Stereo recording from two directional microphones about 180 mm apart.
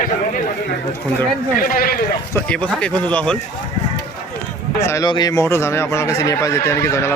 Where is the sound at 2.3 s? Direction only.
5° left (ahead or behind).